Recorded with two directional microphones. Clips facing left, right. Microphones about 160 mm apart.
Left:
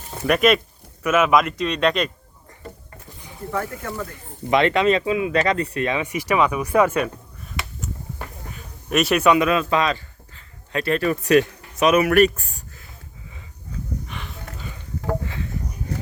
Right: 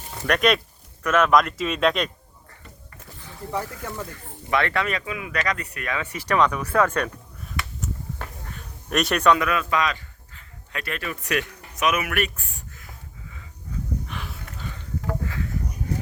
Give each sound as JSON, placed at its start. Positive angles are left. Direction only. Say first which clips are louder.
{"t": 0.3, "sound": "speech", "louder": "left 4 dB", "side_deg": 5}
{"t": 3.5, "sound": "speech", "louder": "left 3 dB", "side_deg": -15}
{"t": 4.4, "sound": "speech", "louder": "left 7 dB", "side_deg": 20}
{"t": 8.4, "sound": "a sound", "louder": "left 4 dB", "side_deg": 5}
{"t": 9.4, "sound": "speech", "louder": "left 4 dB", "side_deg": 25}
{"t": 14.1, "sound": "a sound", "louder": "left 1 dB", "side_deg": 0}